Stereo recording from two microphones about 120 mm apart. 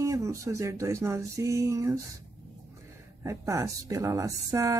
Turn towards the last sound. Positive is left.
turn(degrees=-25)  # may be behind; listen again after turning